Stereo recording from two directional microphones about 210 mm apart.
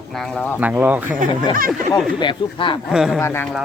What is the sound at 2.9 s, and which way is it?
Speech, centre (ahead or behind).